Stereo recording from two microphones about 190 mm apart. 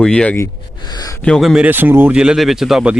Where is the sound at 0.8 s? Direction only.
20° left (ahead or behind).